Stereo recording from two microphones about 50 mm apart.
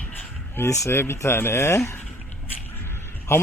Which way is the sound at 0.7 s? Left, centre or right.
Left.